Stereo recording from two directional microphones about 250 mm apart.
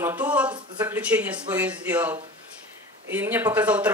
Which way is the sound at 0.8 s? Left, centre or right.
Centre.